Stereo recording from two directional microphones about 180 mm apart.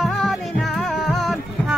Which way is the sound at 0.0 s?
Centre (ahead or behind).